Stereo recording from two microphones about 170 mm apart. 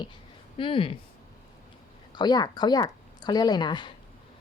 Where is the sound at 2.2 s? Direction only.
25° left (ahead or behind).